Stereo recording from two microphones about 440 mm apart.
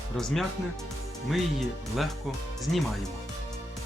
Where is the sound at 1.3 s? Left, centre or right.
Centre.